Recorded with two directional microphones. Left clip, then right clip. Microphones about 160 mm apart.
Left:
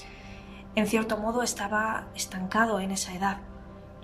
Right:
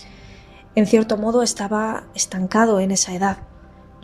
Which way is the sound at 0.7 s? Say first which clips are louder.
Right 10 dB; 30° right (ahead or behind).